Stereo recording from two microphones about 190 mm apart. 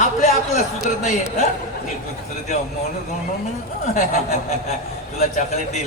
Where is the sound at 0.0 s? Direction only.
40° left (ahead or behind).